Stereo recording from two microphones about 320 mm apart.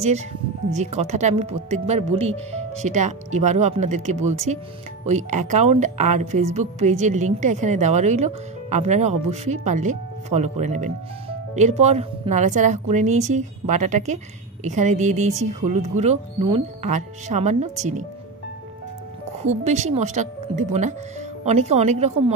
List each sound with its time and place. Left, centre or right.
0.7 s a woman's voice: right
19.4 s a woman's voice: right